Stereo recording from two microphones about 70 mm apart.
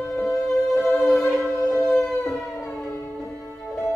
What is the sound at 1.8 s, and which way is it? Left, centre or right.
Howl, centre.